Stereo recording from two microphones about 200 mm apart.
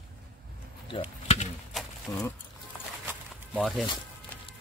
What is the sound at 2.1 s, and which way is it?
Speech, 15° left (ahead or behind).